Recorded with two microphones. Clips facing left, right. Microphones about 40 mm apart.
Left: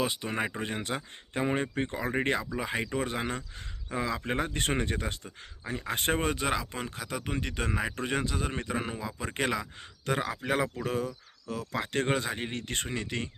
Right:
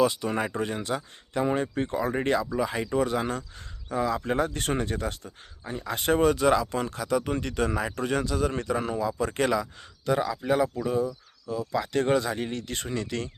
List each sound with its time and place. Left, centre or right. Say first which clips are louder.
0.0 s speech: right 6 dB; left
1.6 s speech: right 3 dB; left
1.9 s speech: right 5 dB; left
3.9 s speech: right 5 dB; left
4.2 s speech: right 4 dB; left
6.2 s speech: right 8 dB; left
6.6 s speech: right 7 dB; centre
10.1 s speech: right 5 dB; left
11.7 s speech: right 5 dB; left